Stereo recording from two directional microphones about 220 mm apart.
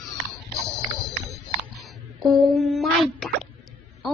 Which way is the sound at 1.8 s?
Centre (ahead or behind).